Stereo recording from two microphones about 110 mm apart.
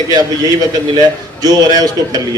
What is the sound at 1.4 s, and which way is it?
Speech, 35° right (ahead or behind).